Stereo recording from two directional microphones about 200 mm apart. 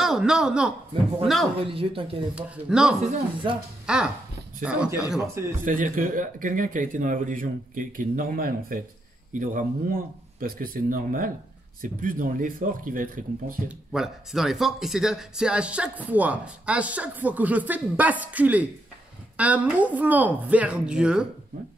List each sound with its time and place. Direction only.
0.0 s a man's voice: 5° right (ahead or behind)
1.6 s speech: 25° right (ahead or behind)
2.3 s a man's voice: 5° right (ahead or behind)
3.4 s speech: 25° right (ahead or behind)
3.8 s a man's voice: 5° right (ahead or behind)
5.7 s speech: 40° right (ahead or behind)
13.7 s speech: centre (ahead or behind)